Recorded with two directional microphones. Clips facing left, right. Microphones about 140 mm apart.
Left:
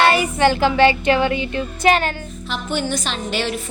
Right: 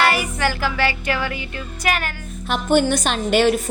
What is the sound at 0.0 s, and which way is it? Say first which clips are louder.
Child singing: left 4 dB; 25° left (ahead or behind).